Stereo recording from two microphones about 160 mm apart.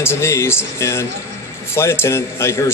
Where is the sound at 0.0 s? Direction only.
15° left (ahead or behind).